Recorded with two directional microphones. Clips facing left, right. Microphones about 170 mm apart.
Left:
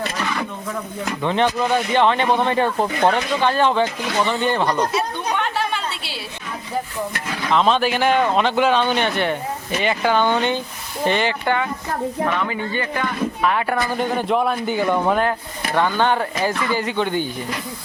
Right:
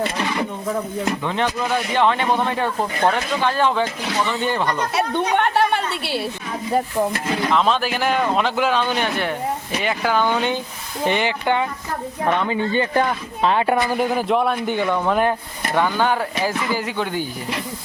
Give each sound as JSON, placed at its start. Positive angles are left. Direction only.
{"t": 1.2, "sound": "speech", "side_deg": 0}
{"t": 4.9, "sound": "a woman's voice", "side_deg": -65}
{"t": 7.5, "sound": "speech", "side_deg": 0}
{"t": 12.9, "sound": "speech", "side_deg": -40}
{"t": 13.4, "sound": "speech", "side_deg": -25}
{"t": 13.9, "sound": "speech", "side_deg": -5}
{"t": 15.7, "sound": "speech", "side_deg": -5}